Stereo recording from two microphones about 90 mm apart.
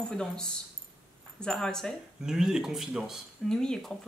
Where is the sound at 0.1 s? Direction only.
10° left (ahead or behind).